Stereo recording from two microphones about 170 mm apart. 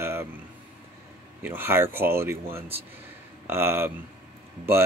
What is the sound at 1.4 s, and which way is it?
Speech, 10° right (ahead or behind).